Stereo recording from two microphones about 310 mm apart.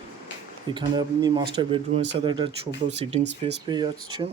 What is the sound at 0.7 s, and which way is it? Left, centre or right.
Speech, centre.